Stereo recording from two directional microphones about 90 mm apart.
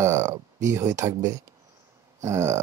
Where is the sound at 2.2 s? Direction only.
35° right (ahead or behind).